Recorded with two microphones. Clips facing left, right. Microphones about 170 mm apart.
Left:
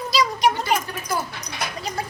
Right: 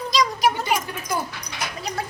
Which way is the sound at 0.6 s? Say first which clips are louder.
Left 1 dB; 15° right (ahead or behind).